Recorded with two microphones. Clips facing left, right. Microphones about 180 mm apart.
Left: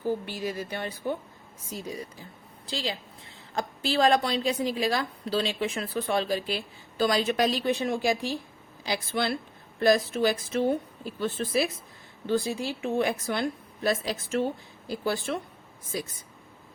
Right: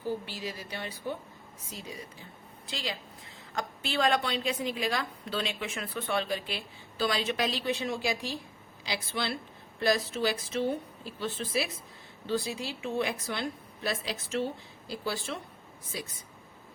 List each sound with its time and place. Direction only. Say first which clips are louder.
0.3 s a woman's voice: left 6 dB; 50° left (ahead or behind)
2.6 s a woman's voice: left 5 dB; 30° left (ahead or behind); by 15.4 s 50° left (ahead or behind)